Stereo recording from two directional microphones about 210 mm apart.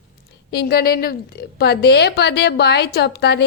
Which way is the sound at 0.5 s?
45° left (ahead or behind).